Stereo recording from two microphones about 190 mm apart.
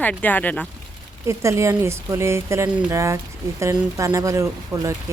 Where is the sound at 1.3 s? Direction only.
15° right (ahead or behind).